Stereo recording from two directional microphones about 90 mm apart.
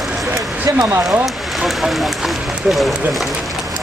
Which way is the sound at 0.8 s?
30° right (ahead or behind).